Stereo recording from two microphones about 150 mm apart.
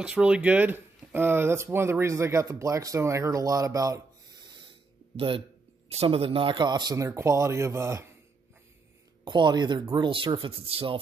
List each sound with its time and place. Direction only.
0.0 s speech: 5° right (ahead or behind); by 4.0 s 20° right (ahead or behind)
5.1 s speech: 35° right (ahead or behind); by 8.1 s 20° right (ahead or behind)
9.2 s speech: 30° right (ahead or behind)